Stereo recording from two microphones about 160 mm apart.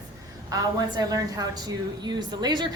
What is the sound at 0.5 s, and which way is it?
A woman's voice, 25° right (ahead or behind).